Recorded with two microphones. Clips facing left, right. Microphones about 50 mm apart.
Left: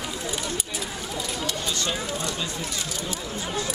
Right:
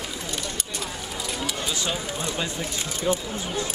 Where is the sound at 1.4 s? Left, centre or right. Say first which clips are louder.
Right 1 dB; centre.